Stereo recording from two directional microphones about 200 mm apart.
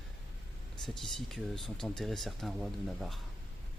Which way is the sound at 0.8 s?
Centre (ahead or behind).